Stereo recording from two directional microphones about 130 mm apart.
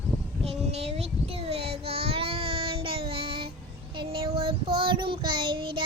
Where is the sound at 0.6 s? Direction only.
55° right (ahead or behind).